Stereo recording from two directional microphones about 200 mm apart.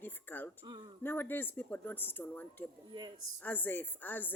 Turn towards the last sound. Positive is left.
turn(degrees=10)  # may be behind; listen again after turning